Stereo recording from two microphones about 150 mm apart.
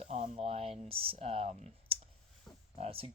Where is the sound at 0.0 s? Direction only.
40° right (ahead or behind).